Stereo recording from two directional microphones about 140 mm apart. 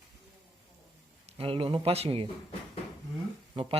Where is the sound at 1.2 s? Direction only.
40° right (ahead or behind).